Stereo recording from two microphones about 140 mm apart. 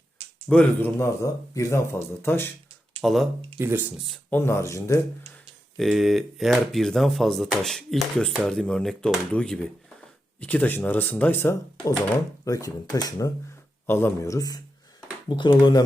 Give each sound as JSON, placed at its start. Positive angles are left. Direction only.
{"t": 0.4, "sound": "speech", "side_deg": 5}
{"t": 0.9, "sound": "speech", "side_deg": 20}
{"t": 3.0, "sound": "speech", "side_deg": 0}
{"t": 3.6, "sound": "speech", "side_deg": -15}
{"t": 4.3, "sound": "speech", "side_deg": 15}
{"t": 5.7, "sound": "speech", "side_deg": 0}